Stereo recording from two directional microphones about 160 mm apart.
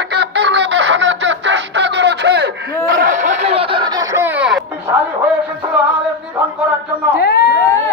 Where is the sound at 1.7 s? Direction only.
90° right.